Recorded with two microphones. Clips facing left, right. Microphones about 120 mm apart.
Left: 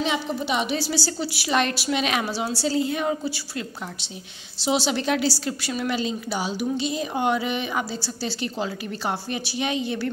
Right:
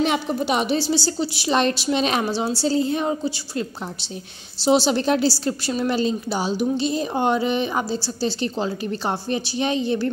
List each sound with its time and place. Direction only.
0.0 s a woman's voice: 50° right (ahead or behind)
0.7 s a woman's voice: 25° right (ahead or behind)
4.6 s a woman's voice: 35° right (ahead or behind)